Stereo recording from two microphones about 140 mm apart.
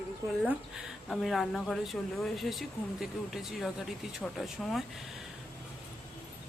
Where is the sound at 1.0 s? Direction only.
Centre (ahead or behind).